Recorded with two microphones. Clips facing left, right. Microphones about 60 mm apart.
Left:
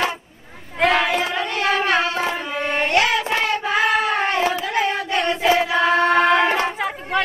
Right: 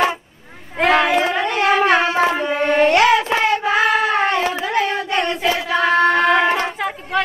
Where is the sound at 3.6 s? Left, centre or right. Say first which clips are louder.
Right 3 dB; centre.